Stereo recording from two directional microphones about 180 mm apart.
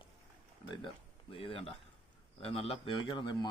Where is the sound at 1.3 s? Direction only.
30° left (ahead or behind).